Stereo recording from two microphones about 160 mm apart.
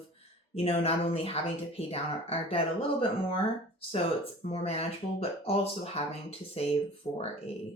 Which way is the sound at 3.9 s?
40° left (ahead or behind).